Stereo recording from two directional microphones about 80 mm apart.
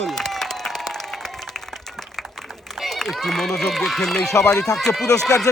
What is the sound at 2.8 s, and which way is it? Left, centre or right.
A man's voice, centre.